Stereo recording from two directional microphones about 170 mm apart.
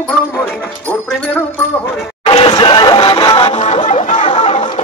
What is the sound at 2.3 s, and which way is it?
Music, 30° left (ahead or behind).